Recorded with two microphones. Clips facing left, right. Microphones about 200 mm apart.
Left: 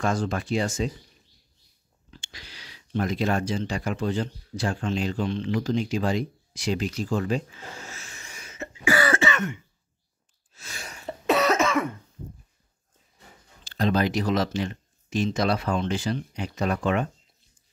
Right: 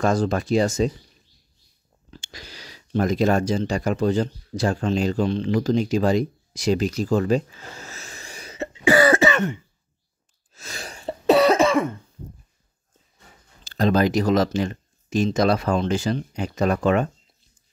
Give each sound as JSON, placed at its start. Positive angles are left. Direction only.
{"t": 0.0, "sound": "speech", "side_deg": -40}
{"t": 2.0, "sound": "speech", "side_deg": -40}
{"t": 10.5, "sound": "throat clearing", "side_deg": -40}
{"t": 13.7, "sound": "speech", "side_deg": -45}